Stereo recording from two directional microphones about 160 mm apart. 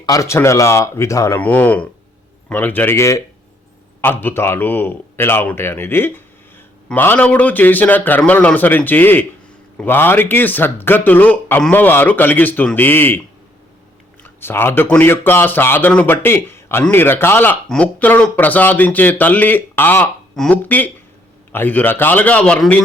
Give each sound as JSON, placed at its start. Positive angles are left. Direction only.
{"t": 0.0, "sound": "speech", "side_deg": 20}